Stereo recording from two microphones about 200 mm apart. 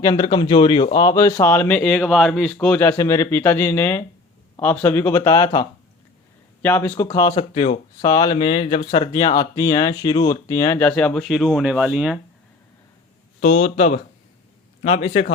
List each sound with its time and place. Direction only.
0.0 s speech: 20° left (ahead or behind); by 12.2 s 5° right (ahead or behind)
13.4 s speech: 35° left (ahead or behind)